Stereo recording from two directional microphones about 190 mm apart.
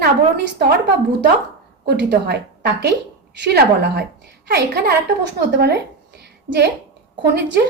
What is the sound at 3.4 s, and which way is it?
A woman's voice, 55° right (ahead or behind).